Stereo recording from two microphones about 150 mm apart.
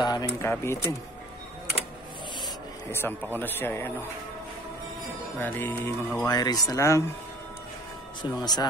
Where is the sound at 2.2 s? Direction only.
30° left (ahead or behind).